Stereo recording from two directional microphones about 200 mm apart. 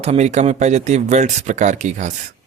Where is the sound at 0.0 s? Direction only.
35° right (ahead or behind).